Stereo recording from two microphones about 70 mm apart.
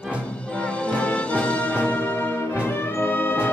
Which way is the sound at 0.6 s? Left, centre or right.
Centre.